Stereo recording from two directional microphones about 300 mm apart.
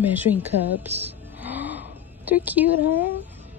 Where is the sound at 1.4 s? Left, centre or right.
Centre.